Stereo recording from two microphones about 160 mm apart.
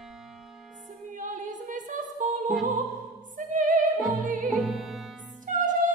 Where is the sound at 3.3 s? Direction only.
55° right (ahead or behind).